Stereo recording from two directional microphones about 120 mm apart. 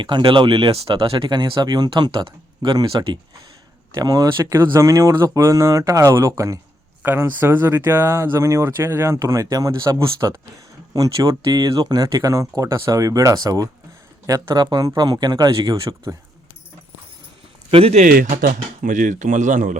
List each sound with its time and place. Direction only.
0.0 s speech: 45° right (ahead or behind)
1.3 s speech: 35° right (ahead or behind)
17.7 s speech: 50° right (ahead or behind)
18.9 s speech: 90° right